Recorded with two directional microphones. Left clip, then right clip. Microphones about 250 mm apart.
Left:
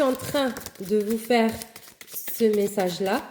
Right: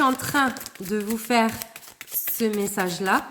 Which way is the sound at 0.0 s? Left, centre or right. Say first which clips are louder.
Right 2 dB; right.